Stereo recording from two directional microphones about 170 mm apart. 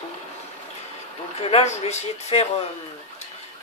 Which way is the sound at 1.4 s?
35° left (ahead or behind).